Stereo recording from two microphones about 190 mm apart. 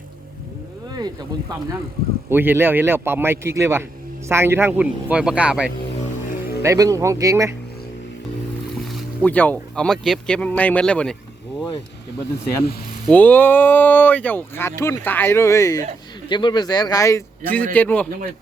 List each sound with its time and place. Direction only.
2.3 s a man's voice: 10° right (ahead or behind)
6.6 s a man's voice: 15° right (ahead or behind)
8.8 s speech: centre (ahead or behind)
13.1 s a man's voice: 10° left (ahead or behind)